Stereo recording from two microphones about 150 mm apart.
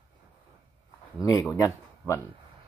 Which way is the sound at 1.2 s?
20° left (ahead or behind).